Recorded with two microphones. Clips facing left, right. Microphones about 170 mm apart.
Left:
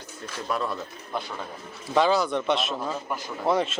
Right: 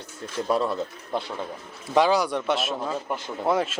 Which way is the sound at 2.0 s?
10° right (ahead or behind).